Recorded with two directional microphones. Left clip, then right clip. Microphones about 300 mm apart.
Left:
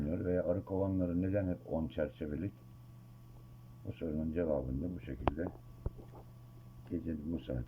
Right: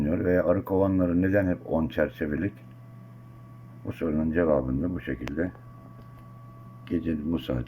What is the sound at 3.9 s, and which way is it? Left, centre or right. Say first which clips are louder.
Speech: right 11 dB; centre.